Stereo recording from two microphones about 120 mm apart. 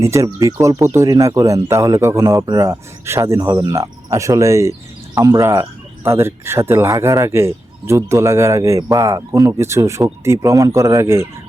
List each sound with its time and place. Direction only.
0.0 s speech: 25° right (ahead or behind)